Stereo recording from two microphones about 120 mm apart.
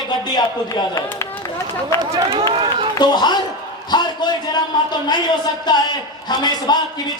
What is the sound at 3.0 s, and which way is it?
A man's voice, 35° left (ahead or behind).